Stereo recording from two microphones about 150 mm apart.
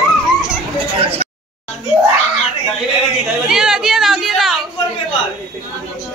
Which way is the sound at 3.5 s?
5° right (ahead or behind).